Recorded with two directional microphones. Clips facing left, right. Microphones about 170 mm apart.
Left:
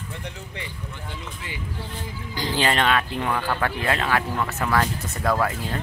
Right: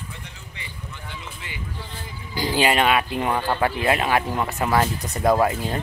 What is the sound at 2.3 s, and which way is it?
Speech, 10° right (ahead or behind).